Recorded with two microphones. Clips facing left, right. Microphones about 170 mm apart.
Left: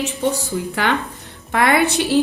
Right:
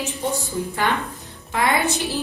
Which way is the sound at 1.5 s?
65° left (ahead or behind).